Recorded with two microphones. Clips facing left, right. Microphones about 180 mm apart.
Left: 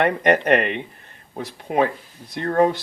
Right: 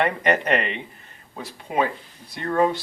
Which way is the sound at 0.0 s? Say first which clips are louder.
Left 3 dB; 55° left (ahead or behind).